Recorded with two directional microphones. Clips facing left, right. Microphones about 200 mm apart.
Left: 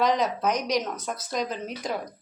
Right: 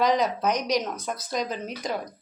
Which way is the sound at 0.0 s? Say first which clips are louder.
Right 1 dB; centre (ahead or behind).